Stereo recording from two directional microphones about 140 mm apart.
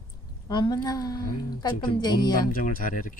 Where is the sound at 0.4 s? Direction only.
30° left (ahead or behind).